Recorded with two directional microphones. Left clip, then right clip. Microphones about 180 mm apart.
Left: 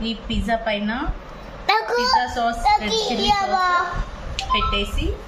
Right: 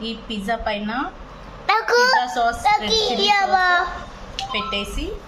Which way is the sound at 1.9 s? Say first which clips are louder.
Right 3 dB; 30° right (ahead or behind).